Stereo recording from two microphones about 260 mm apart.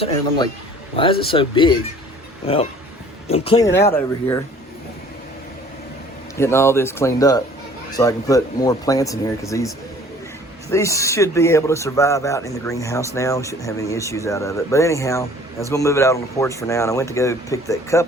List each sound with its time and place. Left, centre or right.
0.9 s speech: centre
3.2 s speech: left
6.3 s speech: centre